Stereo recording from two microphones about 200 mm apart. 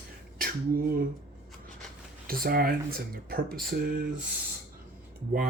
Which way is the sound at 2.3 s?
45° right (ahead or behind).